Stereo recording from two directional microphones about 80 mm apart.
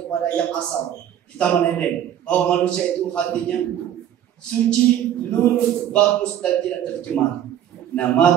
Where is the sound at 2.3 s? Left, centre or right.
Centre.